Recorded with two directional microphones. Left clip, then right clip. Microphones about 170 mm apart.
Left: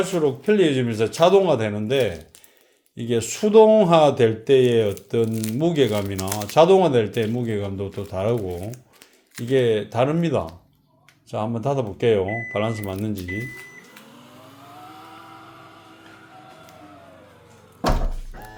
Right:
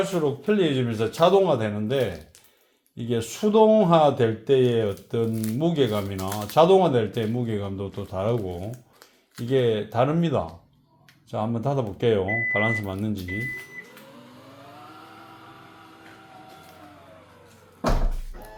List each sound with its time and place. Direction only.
0.1 s speech: 20° left (ahead or behind)
5.3 s speech: 60° left (ahead or behind)
5.5 s speech: 25° left (ahead or behind)
6.1 s speech: 70° left (ahead or behind)
6.5 s speech: 25° left (ahead or behind)